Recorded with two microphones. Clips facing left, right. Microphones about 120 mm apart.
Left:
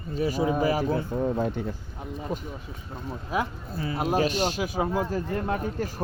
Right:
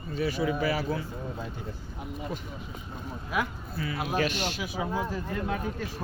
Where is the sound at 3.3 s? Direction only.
30° left (ahead or behind).